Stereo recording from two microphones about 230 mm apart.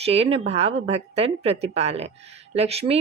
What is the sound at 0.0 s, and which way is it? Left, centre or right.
Speech, right.